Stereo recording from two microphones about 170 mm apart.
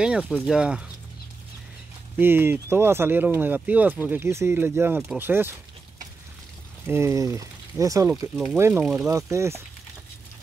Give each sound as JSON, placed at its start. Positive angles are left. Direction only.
{"t": 0.0, "sound": "speech", "side_deg": -5}
{"t": 2.1, "sound": "speech", "side_deg": -10}
{"t": 6.9, "sound": "speech", "side_deg": -15}